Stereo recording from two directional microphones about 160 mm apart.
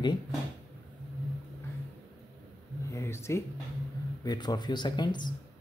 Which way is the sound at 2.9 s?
15° left (ahead or behind).